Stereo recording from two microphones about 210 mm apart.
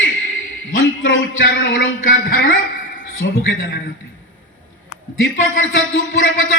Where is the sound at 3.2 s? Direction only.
60° left (ahead or behind).